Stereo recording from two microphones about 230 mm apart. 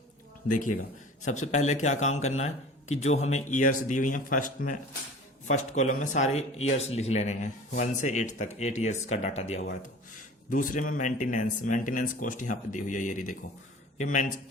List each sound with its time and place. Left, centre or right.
0.4 s speech: left